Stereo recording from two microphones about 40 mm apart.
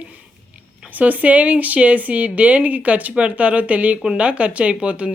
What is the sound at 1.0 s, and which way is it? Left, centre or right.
Speech, right.